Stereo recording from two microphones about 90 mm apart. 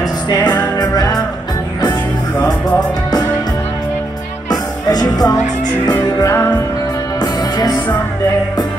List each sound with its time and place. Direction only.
0.7 s music: 50° left (ahead or behind)
1.9 s music: 15° left (ahead or behind)
4.5 s music: 50° left (ahead or behind)
7.2 s music: 45° left (ahead or behind)